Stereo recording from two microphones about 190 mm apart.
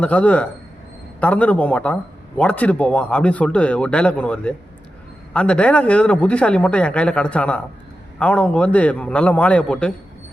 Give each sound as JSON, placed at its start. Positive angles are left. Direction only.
{"t": 0.0, "sound": "a man's voice", "side_deg": 5}